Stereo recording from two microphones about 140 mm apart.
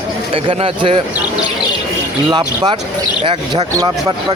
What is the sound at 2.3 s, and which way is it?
Speech, 35° right (ahead or behind).